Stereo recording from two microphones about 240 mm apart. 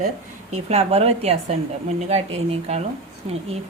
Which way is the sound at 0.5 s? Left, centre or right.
Right.